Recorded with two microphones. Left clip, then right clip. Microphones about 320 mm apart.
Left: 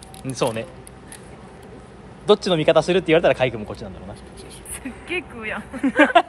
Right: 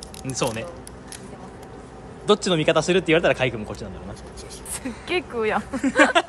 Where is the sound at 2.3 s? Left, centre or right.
Centre.